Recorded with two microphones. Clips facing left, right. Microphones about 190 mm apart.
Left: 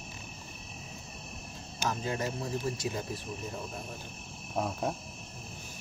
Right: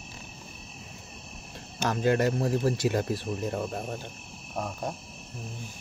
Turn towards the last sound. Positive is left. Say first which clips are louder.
# left 1 dB
turn(degrees=5)  # may be behind; listen again after turning